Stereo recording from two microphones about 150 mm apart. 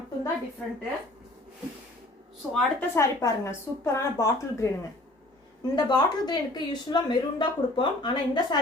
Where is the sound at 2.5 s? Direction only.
5° left (ahead or behind).